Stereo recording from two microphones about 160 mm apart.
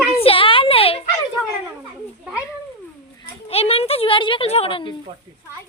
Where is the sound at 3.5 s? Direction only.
40° left (ahead or behind).